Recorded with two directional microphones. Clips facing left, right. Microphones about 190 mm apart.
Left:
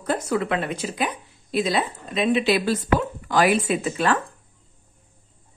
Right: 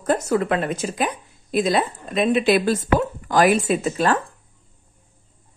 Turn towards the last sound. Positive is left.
turn(degrees=-40)  # may be behind; listen again after turning